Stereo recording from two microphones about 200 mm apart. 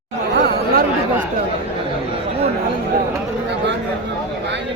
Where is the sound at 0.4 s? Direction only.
50° right (ahead or behind).